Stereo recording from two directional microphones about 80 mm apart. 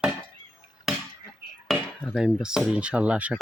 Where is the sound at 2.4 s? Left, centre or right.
Centre.